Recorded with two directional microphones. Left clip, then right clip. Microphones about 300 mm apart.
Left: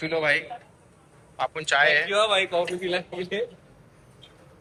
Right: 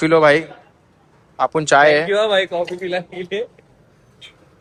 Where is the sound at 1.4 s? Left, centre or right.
Centre.